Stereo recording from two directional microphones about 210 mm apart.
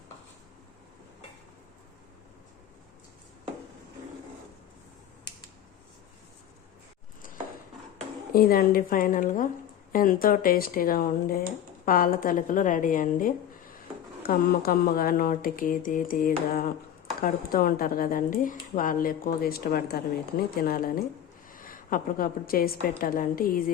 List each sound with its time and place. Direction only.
8.3 s a woman's voice: 45° left (ahead or behind)